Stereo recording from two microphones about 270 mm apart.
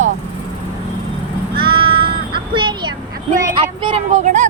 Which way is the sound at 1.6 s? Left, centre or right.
Centre.